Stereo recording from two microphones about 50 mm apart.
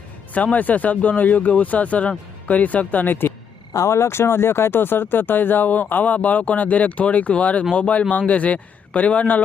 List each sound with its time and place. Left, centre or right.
0.3 s speech: left
3.8 s speech: left